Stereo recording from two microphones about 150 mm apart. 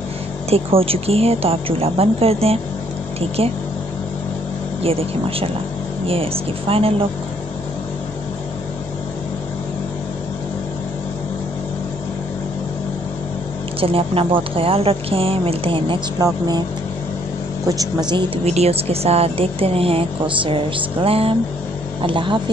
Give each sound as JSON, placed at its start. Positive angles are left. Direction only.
{"t": 0.5, "sound": "a woman's voice", "side_deg": -40}
{"t": 6.0, "sound": "a woman's voice", "side_deg": -40}
{"t": 13.7, "sound": "a woman's voice", "side_deg": -40}
{"t": 16.2, "sound": "speech", "side_deg": -25}
{"t": 18.1, "sound": "a woman's voice", "side_deg": -40}